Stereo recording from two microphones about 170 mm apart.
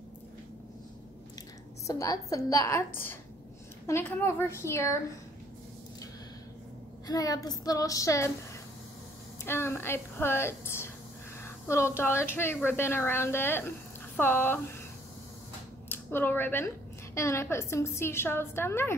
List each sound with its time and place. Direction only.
1.9 s a woman's voice: 20° left (ahead or behind)
7.1 s a woman's voice: 20° left (ahead or behind)
9.4 s a woman's voice: 15° left (ahead or behind)
15.9 s a woman's voice: 15° left (ahead or behind)